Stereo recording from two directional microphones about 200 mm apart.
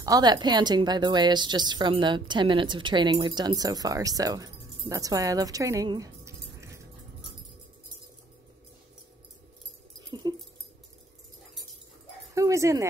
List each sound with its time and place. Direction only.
0.0 s speech: 20° right (ahead or behind)
10.0 s dog: 20° right (ahead or behind)
12.4 s speech: 15° right (ahead or behind)